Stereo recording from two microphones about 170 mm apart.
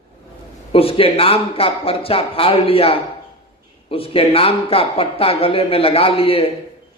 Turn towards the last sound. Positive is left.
turn(degrees=35)  # may be behind; listen again after turning